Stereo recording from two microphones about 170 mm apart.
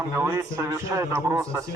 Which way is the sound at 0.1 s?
15° right (ahead or behind).